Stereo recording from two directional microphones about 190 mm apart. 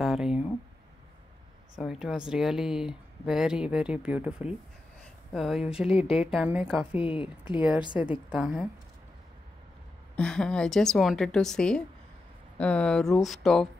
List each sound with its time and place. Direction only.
0.0 s a sound: 5° right (ahead or behind)
1.8 s speech: centre (ahead or behind)
5.9 s speech: 30° left (ahead or behind)
6.1 s speech: 5° right (ahead or behind)
7.0 s speech: 25° left (ahead or behind)
8.0 s a woman's voice: 10° right (ahead or behind)
10.1 s speech: 5° left (ahead or behind)